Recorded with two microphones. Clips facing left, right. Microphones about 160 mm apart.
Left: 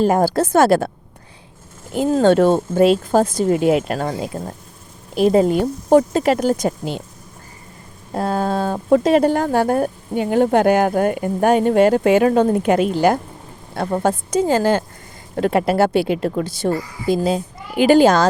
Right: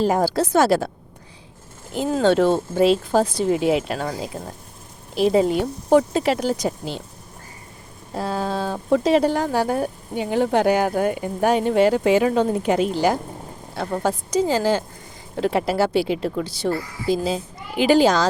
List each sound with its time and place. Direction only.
0.0 s speech: 50° left (ahead or behind)
2.0 s speech: 50° left (ahead or behind)
5.1 s speech: 50° left (ahead or behind)
8.1 s speech: 50° left (ahead or behind)